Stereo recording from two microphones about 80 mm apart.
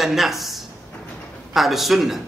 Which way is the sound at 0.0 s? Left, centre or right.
Centre.